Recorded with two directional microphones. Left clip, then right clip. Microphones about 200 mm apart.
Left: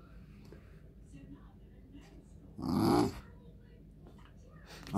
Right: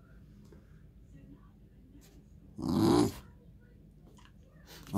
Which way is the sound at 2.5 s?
15° right (ahead or behind).